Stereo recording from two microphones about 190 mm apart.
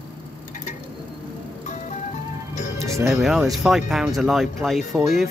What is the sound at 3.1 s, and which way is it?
Speech, centre (ahead or behind).